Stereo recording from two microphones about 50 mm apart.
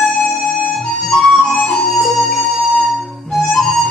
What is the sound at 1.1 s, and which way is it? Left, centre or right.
Flute, centre.